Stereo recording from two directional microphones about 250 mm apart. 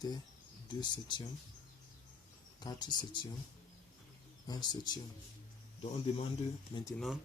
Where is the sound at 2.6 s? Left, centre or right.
Centre.